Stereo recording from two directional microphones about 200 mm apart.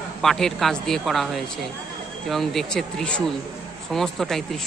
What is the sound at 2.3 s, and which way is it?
Speech, centre (ahead or behind).